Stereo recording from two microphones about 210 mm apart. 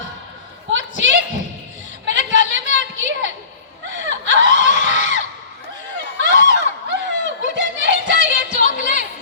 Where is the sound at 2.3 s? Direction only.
60° right (ahead or behind).